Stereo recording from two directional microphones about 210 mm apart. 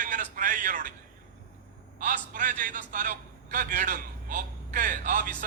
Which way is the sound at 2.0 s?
40° right (ahead or behind).